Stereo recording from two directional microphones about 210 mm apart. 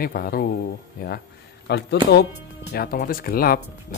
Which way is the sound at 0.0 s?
45° left (ahead or behind).